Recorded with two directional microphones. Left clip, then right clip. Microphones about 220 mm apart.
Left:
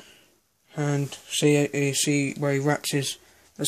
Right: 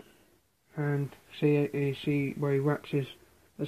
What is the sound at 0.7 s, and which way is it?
Speech, 55° left (ahead or behind).